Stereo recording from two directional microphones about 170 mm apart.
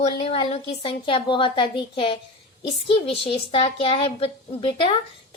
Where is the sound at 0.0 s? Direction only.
40° left (ahead or behind).